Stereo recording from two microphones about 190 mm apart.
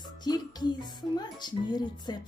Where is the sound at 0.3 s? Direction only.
20° left (ahead or behind).